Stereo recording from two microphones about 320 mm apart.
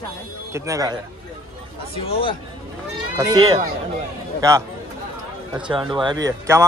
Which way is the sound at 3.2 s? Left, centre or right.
Centre.